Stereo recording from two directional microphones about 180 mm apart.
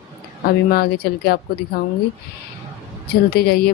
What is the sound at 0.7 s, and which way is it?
Speech, 60° left (ahead or behind).